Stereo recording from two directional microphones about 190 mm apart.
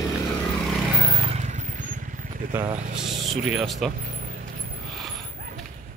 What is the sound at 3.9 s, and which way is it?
Vehicle, 45° right (ahead or behind).